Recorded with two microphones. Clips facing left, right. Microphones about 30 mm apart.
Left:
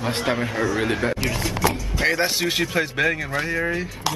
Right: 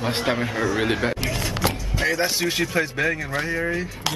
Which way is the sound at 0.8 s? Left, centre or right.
Centre.